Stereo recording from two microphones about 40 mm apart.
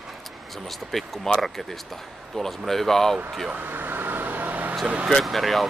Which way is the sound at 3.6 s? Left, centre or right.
Right.